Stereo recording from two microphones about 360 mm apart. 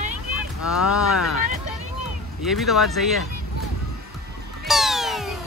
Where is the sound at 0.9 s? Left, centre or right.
Left.